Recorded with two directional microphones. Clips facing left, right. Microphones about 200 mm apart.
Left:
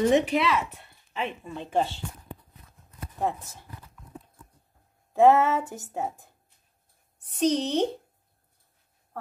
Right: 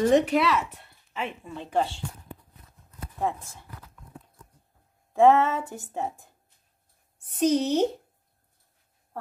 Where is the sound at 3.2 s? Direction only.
Centre (ahead or behind).